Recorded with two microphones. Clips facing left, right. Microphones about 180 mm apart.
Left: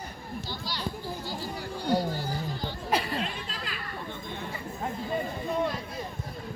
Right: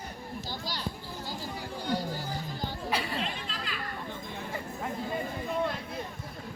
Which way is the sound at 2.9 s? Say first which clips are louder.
Left 5 dB; 45° left (ahead or behind).